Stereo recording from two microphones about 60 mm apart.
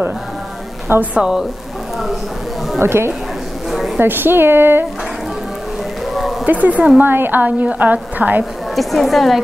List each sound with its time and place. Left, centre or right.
1.1 s a woman's voice: centre
2.8 s a woman's voice: right
3.7 s a sound: centre
4.0 s speech: right
6.4 s a woman's voice: right
8.7 s a woman's voice: centre